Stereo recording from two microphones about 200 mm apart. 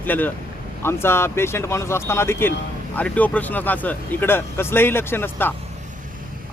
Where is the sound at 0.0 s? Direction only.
10° left (ahead or behind).